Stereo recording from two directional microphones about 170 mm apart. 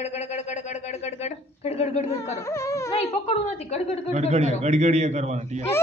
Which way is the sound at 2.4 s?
15° left (ahead or behind).